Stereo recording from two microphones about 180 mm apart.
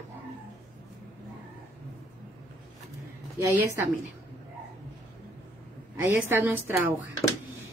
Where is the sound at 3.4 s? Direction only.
15° right (ahead or behind).